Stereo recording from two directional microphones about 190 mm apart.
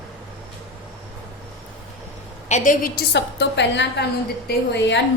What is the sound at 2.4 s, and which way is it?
A woman's voice, 40° left (ahead or behind).